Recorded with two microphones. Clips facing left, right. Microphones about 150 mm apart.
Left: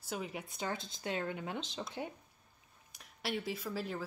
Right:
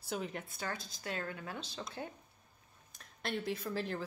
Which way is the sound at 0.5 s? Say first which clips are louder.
Left 2 dB; 20° left (ahead or behind).